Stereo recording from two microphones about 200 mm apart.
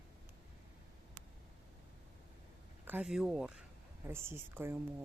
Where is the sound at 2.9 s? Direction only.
5° right (ahead or behind).